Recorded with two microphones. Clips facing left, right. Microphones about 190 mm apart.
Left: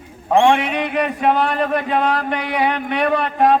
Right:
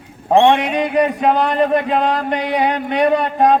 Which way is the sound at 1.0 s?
40° right (ahead or behind).